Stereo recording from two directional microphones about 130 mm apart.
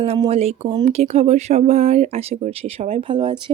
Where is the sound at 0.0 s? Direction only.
50° right (ahead or behind).